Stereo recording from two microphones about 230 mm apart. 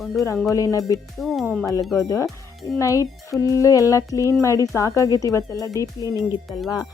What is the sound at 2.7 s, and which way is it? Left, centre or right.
Speech, centre.